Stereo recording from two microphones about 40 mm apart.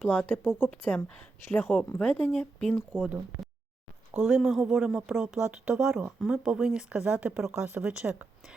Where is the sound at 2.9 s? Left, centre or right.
Right.